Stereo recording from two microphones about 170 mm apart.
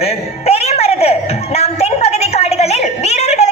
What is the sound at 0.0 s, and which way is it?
Music, 35° left (ahead or behind).